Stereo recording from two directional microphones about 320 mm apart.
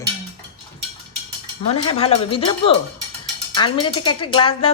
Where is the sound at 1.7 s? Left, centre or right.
Centre.